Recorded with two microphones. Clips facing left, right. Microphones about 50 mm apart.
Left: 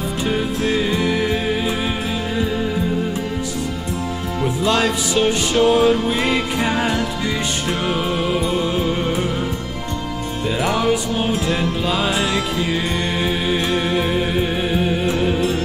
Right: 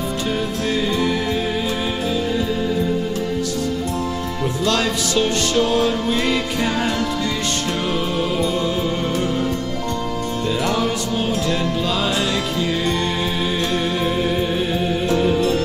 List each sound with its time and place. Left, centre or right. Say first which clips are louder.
0.3 s music: left 3 dB; centre
4.6 s music: left 2 dB; centre
7.9 s music: left 2 dB; centre
10.4 s music: left 2 dB; centre